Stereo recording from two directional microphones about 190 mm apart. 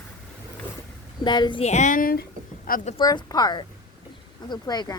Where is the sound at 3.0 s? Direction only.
20° left (ahead or behind).